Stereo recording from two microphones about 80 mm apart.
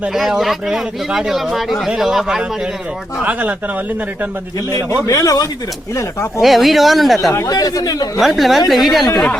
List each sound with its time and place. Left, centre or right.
0.1 s speech: centre
4.7 s speech: left
6.0 s speech: left
6.4 s speech: centre
7.4 s speech: left
8.2 s speech: centre